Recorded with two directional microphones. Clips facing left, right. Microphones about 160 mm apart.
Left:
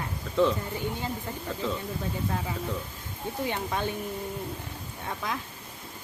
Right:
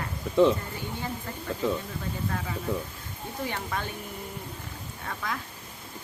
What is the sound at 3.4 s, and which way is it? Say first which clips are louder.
Speech: left 2 dB; 20° left (ahead or behind).